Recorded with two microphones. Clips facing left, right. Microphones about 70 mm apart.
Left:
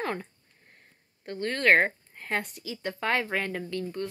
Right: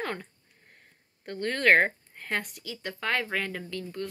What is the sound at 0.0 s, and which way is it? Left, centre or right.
Speech, centre.